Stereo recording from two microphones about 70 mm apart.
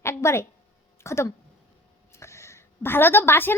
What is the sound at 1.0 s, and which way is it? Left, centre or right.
A woman's voice, left.